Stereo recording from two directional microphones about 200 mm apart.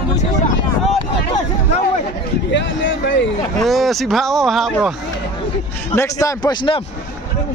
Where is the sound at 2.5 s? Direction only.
65° left (ahead or behind).